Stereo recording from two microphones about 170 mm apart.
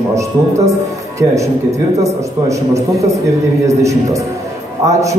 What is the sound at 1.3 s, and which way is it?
Speech, 20° right (ahead or behind).